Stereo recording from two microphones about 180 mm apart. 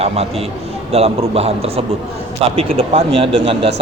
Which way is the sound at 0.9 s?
35° right (ahead or behind).